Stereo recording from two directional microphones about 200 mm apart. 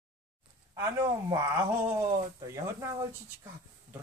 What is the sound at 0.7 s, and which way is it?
Speech, 15° right (ahead or behind).